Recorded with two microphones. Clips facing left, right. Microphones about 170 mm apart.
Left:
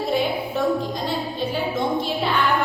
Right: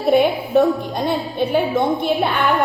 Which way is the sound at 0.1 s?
60° right (ahead or behind).